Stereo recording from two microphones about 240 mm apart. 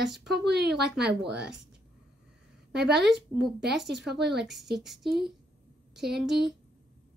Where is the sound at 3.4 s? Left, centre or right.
Right.